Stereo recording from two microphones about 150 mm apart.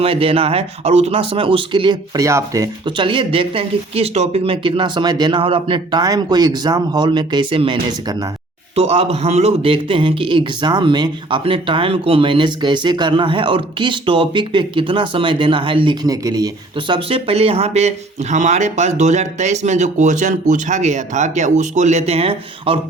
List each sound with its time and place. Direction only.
0.0 s speech: 40° right (ahead or behind)
8.7 s speech: 45° right (ahead or behind); by 16.5 s 25° right (ahead or behind)
16.9 s speech: 40° right (ahead or behind)